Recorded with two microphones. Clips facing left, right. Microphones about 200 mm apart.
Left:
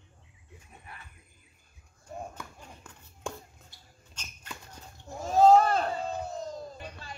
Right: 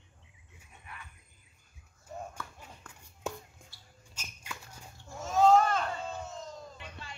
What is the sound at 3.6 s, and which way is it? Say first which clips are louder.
Dog: even; 15° right (ahead or behind).